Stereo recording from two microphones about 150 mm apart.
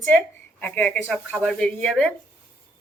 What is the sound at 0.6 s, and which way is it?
Speech, 10° left (ahead or behind).